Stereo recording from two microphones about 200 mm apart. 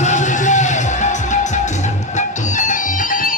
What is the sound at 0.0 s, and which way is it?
Music, 35° left (ahead or behind).